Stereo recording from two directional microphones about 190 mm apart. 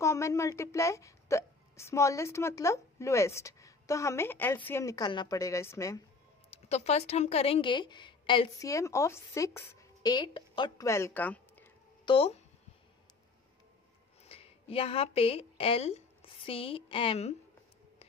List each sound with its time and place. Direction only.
0.0 s speech: 15° left (ahead or behind)
6.5 s speech: 35° left (ahead or behind); by 11.7 s 10° left (ahead or behind)
12.0 s speech: 30° left (ahead or behind)
14.2 s speech: 30° left (ahead or behind)